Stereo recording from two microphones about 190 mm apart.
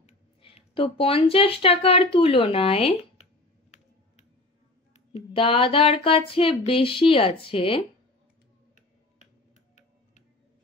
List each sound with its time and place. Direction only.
0.0 s speech: 30° left (ahead or behind)
5.1 s speech: 30° left (ahead or behind)